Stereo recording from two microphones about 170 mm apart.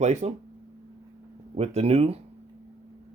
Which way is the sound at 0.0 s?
40° right (ahead or behind).